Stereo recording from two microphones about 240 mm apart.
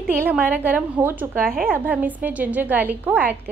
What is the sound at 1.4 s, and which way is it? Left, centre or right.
Speech, right.